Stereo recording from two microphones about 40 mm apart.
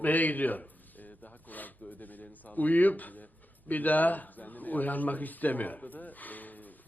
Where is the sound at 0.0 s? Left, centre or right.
Left.